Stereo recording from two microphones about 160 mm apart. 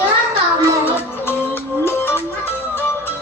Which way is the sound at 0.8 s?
15° left (ahead or behind).